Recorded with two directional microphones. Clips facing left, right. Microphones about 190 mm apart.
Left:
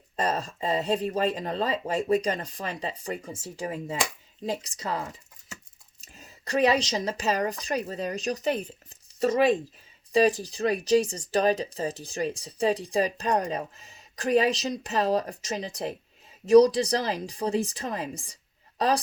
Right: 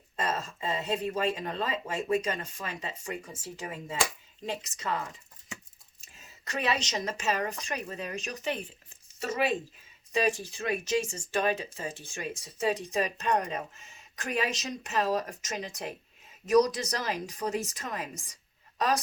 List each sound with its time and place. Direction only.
0.2 s speech: 35° left (ahead or behind)
6.1 s speech: 35° left (ahead or behind)